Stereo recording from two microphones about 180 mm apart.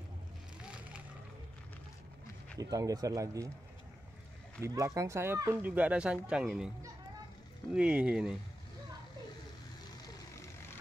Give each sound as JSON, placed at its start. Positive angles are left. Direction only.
{"t": 0.6, "sound": "a sound", "side_deg": -5}
{"t": 2.6, "sound": "speech", "side_deg": -20}
{"t": 4.6, "sound": "speech", "side_deg": -20}
{"t": 7.7, "sound": "speech", "side_deg": -5}
{"t": 10.0, "sound": "vehicle", "side_deg": 15}